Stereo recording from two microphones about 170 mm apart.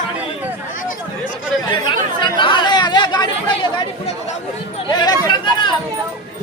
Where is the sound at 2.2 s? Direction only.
30° left (ahead or behind).